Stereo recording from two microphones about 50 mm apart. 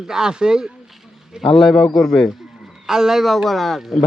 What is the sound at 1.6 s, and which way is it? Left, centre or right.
Speech, centre.